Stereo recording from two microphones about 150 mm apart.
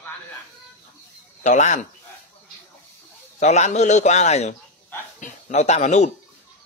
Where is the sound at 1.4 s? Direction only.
55° left (ahead or behind).